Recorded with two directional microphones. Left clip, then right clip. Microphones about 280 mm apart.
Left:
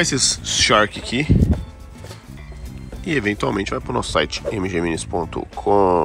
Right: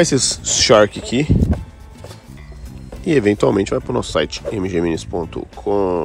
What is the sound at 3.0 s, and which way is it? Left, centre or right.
Speech, centre.